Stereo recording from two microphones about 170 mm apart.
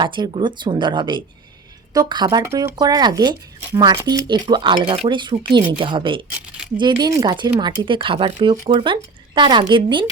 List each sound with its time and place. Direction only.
0.0 s speech: 30° right (ahead or behind)